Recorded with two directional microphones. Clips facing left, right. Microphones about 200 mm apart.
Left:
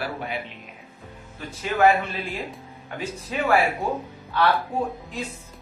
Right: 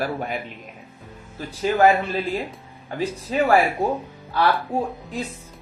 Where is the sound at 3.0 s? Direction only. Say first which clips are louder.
Right 6 dB; 35° right (ahead or behind).